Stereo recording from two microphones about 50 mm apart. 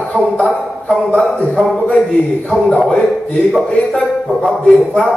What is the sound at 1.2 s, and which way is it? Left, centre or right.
Speech, centre.